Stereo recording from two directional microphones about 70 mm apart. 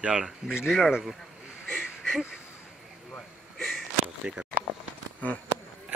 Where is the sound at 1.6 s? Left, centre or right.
Centre.